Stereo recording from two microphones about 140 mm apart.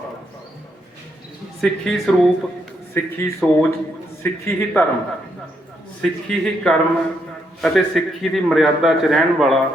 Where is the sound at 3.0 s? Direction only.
15° left (ahead or behind).